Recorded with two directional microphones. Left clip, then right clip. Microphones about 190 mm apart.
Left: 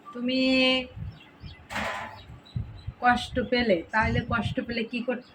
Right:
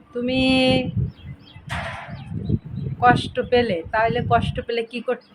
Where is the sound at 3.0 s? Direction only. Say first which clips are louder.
Right 6 dB; 35° right (ahead or behind).